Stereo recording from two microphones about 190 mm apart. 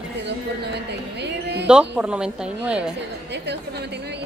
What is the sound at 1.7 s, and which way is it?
A woman's voice, 5° right (ahead or behind).